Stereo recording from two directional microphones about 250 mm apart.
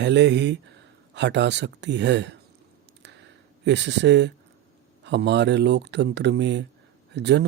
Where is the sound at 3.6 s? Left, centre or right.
Right.